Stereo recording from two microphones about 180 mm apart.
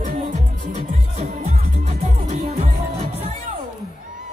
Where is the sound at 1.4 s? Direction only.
40° right (ahead or behind).